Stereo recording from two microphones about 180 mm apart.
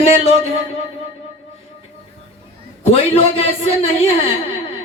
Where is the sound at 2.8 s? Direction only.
35° left (ahead or behind).